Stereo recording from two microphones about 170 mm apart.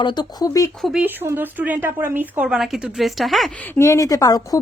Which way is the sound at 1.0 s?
10° right (ahead or behind).